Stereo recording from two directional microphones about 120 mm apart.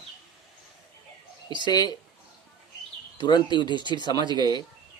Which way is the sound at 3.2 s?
35° left (ahead or behind).